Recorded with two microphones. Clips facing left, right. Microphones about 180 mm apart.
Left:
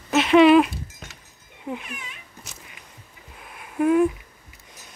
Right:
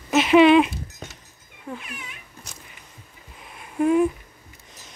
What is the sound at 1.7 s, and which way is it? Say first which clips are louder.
Cat: left 3 dB; 20° left (ahead or behind).